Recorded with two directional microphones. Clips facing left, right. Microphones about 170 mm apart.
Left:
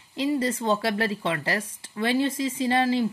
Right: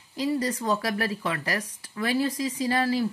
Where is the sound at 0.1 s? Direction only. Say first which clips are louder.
Left 2 dB; 25° left (ahead or behind).